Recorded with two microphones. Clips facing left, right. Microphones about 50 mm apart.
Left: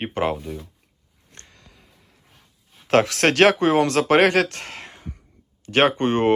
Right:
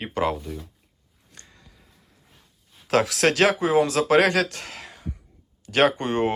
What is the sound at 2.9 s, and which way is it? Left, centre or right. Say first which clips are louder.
Speech: left 3 dB; left.